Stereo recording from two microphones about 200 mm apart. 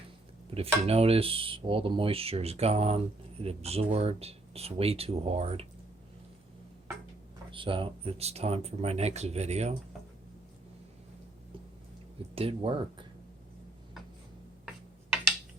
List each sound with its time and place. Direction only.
0.5 s speech: 30° right (ahead or behind)
7.5 s speech: 25° right (ahead or behind)
12.3 s speech: 30° right (ahead or behind)